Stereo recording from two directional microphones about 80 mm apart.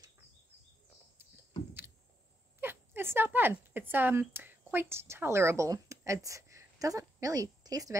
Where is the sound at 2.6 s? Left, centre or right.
Right.